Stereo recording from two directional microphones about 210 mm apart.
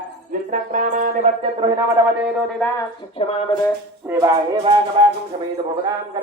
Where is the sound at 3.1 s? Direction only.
25° left (ahead or behind).